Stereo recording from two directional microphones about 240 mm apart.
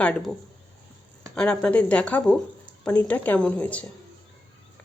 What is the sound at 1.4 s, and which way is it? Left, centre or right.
A woman's voice, centre.